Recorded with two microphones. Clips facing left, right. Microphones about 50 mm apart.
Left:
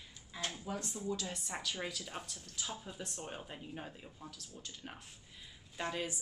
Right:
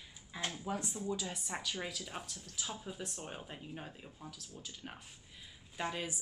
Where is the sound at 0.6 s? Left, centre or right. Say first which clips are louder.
Right 2 dB; centre.